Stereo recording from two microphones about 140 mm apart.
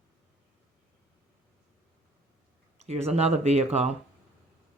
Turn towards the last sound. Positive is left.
turn(degrees=-50)  # may be behind; listen again after turning